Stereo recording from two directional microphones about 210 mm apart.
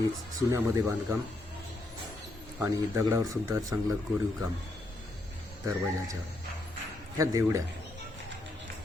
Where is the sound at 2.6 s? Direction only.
15° right (ahead or behind).